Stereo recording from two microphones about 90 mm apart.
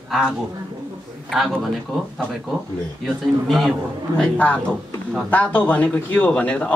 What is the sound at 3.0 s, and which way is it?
Speech, centre (ahead or behind).